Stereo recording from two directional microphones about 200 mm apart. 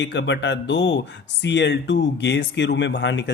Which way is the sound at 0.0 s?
60° left (ahead or behind).